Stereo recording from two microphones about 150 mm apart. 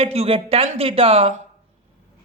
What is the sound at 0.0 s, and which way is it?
Speech, 40° right (ahead or behind).